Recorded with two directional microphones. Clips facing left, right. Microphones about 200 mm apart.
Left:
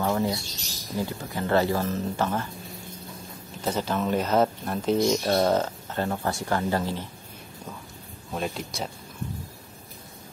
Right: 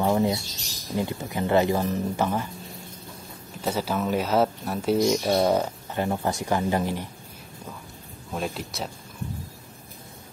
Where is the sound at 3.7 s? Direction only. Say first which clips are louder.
Even; 10° right (ahead or behind).